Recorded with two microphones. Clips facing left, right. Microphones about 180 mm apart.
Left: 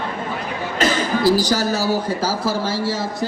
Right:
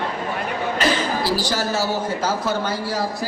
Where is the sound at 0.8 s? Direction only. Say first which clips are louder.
Left 3 dB; 45° left (ahead or behind).